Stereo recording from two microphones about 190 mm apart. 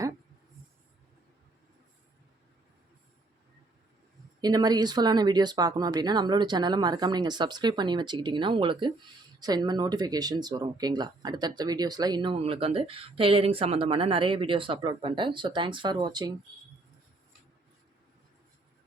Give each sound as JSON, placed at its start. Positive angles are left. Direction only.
{"t": 4.4, "sound": "speech", "side_deg": -20}